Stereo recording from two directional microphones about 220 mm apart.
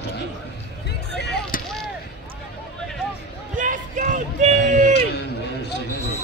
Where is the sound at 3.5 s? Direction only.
35° right (ahead or behind).